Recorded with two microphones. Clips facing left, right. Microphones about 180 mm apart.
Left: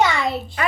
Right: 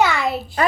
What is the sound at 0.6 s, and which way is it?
Speech, 35° right (ahead or behind).